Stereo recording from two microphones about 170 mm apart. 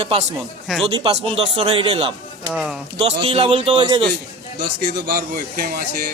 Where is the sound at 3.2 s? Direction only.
35° right (ahead or behind).